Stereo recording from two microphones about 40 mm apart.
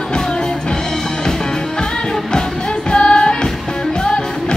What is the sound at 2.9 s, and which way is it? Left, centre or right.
Music, left.